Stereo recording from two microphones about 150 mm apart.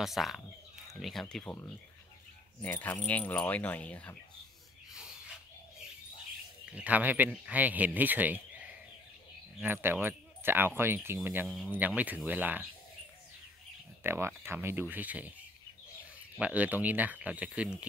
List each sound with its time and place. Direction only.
0.0 s speech: centre (ahead or behind)
2.6 s speech: 10° left (ahead or behind)
6.7 s speech: 10° right (ahead or behind)
9.6 s speech: 15° right (ahead or behind)
11.4 s speech: centre (ahead or behind)
11.7 s speech: 10° right (ahead or behind)
14.0 s speech: 15° right (ahead or behind)
16.3 s speech: 10° right (ahead or behind)